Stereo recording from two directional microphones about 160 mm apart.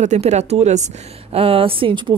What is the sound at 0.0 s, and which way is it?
Speech, 45° right (ahead or behind).